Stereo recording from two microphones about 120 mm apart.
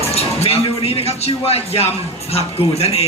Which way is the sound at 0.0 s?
60° left (ahead or behind).